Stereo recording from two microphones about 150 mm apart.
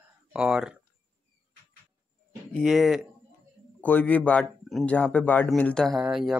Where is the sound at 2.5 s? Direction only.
5° left (ahead or behind).